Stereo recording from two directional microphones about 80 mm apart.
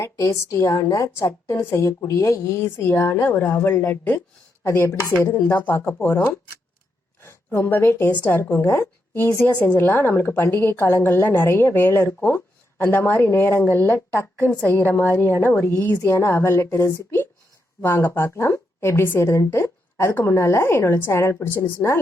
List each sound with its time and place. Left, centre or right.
0.0 s a woman's voice: left